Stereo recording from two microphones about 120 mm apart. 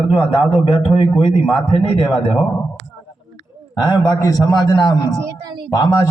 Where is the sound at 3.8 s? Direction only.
40° left (ahead or behind).